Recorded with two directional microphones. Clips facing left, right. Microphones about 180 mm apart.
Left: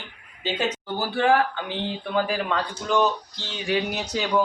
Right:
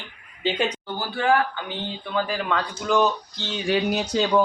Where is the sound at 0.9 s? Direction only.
25° left (ahead or behind).